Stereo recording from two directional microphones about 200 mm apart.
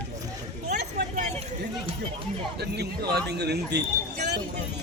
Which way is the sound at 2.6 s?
55° right (ahead or behind).